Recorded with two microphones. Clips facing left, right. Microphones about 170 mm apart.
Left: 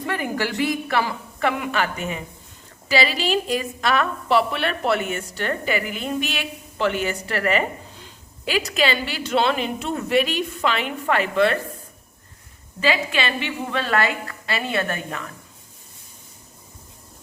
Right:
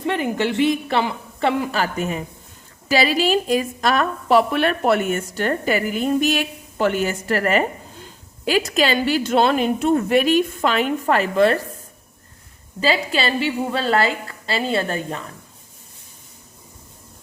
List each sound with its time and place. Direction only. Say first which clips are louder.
0.0 s a woman's voice: right 4 dB; 25° right (ahead or behind); by 11.6 s 40° right (ahead or behind)
12.8 s a woman's voice: right 2 dB; 35° right (ahead or behind)